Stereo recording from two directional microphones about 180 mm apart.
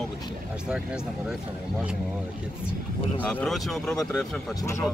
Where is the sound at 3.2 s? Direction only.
5° left (ahead or behind).